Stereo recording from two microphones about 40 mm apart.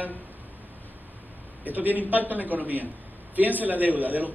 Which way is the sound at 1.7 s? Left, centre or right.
Right.